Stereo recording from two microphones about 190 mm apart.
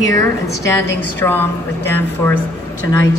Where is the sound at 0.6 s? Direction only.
15° left (ahead or behind).